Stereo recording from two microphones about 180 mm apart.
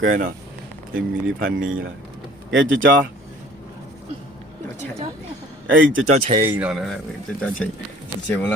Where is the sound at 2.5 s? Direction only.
90° right.